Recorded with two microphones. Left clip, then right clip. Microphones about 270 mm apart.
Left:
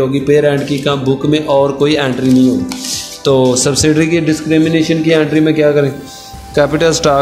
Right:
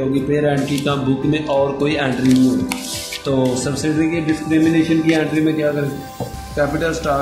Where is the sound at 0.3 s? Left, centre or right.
Left.